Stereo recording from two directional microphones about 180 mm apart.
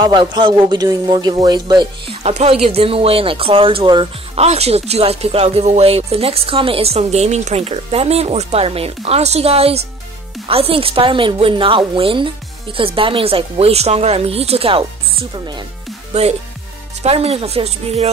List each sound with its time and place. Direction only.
0.0 s speech: 25° right (ahead or behind)
2.2 s speech: 35° right (ahead or behind)
16.1 s speech: 35° right (ahead or behind)